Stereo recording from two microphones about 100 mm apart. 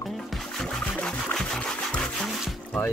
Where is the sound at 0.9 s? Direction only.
10° left (ahead or behind).